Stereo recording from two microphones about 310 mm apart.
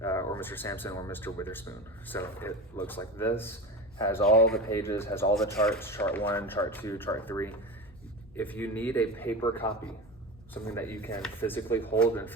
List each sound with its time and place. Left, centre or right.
0.0 s a man's voice: centre